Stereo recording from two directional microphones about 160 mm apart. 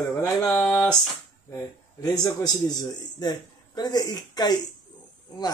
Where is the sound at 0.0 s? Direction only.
15° left (ahead or behind).